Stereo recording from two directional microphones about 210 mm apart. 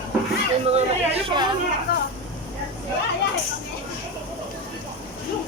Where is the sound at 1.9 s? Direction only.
45° left (ahead or behind).